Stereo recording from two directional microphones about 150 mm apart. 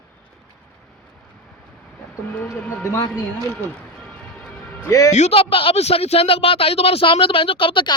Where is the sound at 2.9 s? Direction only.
25° left (ahead or behind).